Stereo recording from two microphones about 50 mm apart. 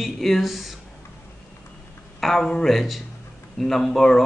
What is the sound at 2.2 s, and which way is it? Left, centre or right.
A man's voice, centre.